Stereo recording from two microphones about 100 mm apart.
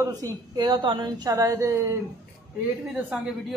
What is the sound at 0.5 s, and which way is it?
A woman's voice, 45° right (ahead or behind).